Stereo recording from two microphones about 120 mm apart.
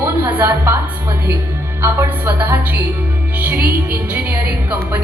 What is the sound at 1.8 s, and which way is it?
A woman's voice, 20° right (ahead or behind).